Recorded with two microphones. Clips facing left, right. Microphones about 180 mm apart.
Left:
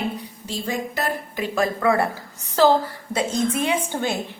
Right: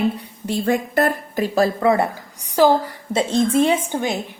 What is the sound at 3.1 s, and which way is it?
Speech, 30° right (ahead or behind).